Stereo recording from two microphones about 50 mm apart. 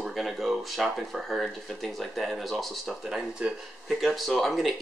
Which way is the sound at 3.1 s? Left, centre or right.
Centre.